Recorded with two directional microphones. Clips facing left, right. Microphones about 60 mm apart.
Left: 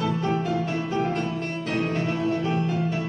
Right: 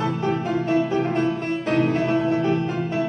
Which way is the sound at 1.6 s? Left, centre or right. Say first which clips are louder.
Right 6 dB; right.